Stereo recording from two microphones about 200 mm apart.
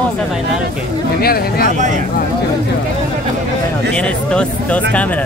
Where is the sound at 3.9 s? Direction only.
5° left (ahead or behind).